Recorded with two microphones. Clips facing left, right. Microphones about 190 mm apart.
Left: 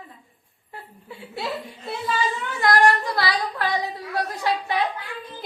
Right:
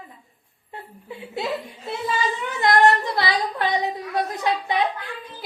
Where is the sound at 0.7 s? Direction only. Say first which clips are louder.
Right 3 dB; 20° right (ahead or behind).